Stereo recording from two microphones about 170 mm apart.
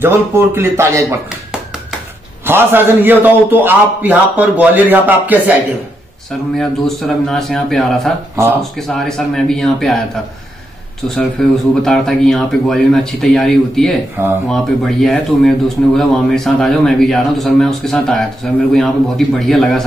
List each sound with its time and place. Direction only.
0.0 s a man's voice: 15° right (ahead or behind)
2.4 s a man's voice: 15° right (ahead or behind)
7.2 s a man's voice: 5° left (ahead or behind)
8.4 s a man's voice: 15° right (ahead or behind)
8.7 s a man's voice: centre (ahead or behind)
11.1 s a man's voice: 5° left (ahead or behind)
14.2 s a man's voice: 15° right (ahead or behind)
14.5 s a man's voice: centre (ahead or behind)